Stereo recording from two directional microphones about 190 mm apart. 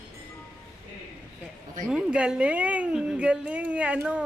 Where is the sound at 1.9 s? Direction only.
5° right (ahead or behind).